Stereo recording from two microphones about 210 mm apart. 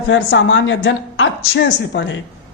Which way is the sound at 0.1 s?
65° left (ahead or behind).